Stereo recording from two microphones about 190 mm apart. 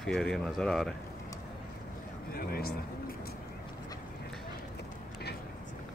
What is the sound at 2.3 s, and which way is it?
Speech, 50° left (ahead or behind).